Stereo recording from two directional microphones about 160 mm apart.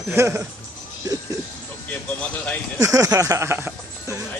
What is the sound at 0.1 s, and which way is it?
Speech, 15° right (ahead or behind).